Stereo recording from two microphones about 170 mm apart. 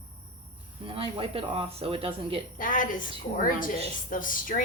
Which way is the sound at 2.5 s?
55° left (ahead or behind).